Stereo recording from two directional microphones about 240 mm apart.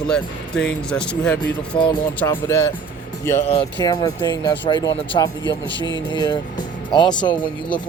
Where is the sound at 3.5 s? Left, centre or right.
Left.